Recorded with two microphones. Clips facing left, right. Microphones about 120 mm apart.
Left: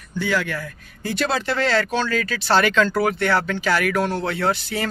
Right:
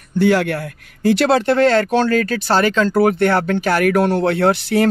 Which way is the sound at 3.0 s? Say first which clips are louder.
Right 5 dB; 50° right (ahead or behind).